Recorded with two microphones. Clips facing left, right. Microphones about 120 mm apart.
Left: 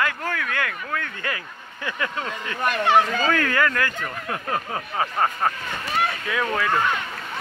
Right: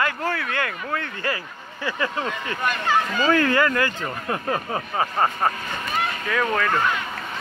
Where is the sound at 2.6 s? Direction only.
65° left (ahead or behind).